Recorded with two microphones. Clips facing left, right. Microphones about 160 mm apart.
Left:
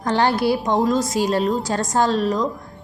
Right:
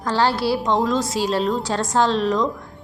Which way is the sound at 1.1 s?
45° left (ahead or behind).